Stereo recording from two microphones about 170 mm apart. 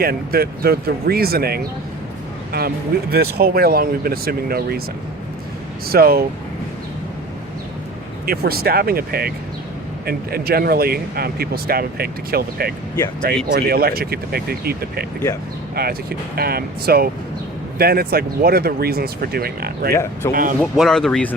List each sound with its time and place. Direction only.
0.0 s speech: 60° right (ahead or behind)
5.9 s speech: 65° right (ahead or behind)
8.3 s speech: 65° right (ahead or behind)
19.9 s speech: 15° left (ahead or behind)
20.3 s speech: 55° right (ahead or behind)
20.6 s speech: centre (ahead or behind)